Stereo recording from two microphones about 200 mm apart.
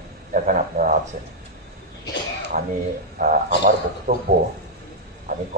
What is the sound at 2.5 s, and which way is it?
A man's voice, 45° right (ahead or behind).